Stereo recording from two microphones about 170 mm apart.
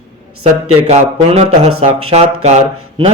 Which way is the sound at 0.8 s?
35° right (ahead or behind).